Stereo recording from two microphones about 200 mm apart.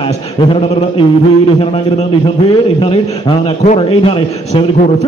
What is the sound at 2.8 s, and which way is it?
A man's voice, 25° left (ahead or behind).